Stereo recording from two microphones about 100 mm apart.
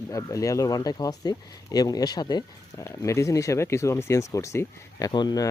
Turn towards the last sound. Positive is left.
turn(degrees=45)  # may be behind; listen again after turning